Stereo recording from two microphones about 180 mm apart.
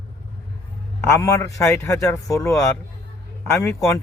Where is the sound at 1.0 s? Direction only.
15° left (ahead or behind).